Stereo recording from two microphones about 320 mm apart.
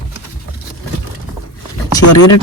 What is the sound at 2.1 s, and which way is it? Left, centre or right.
Speech, left.